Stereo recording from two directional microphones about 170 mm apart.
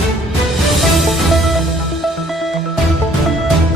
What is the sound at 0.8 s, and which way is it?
Music, centre (ahead or behind).